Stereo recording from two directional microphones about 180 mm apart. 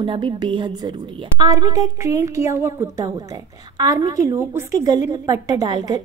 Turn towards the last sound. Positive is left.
turn(degrees=-20)  # may be behind; listen again after turning